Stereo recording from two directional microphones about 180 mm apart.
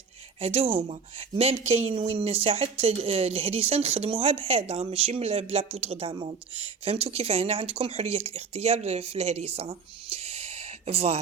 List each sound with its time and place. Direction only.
0.3 s a woman's voice: 30° right (ahead or behind)